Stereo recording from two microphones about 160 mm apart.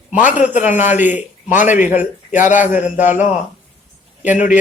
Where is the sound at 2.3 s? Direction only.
50° left (ahead or behind).